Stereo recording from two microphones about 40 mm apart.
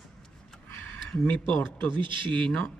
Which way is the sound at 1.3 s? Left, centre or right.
Left.